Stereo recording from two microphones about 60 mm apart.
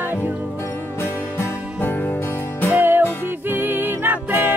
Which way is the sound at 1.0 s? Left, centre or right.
Left.